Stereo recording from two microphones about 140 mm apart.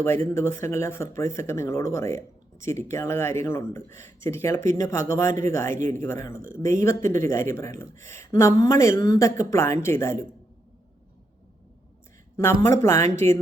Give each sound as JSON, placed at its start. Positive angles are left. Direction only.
{"t": 0.0, "sound": "speech", "side_deg": 20}
{"t": 6.3, "sound": "speech", "side_deg": -70}
{"t": 6.7, "sound": "speech", "side_deg": 20}
{"t": 12.4, "sound": "speech", "side_deg": 20}